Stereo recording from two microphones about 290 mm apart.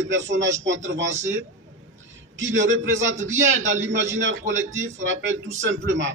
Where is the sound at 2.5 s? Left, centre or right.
Right.